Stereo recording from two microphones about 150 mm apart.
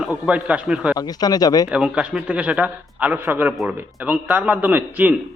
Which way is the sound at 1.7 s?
5° right (ahead or behind).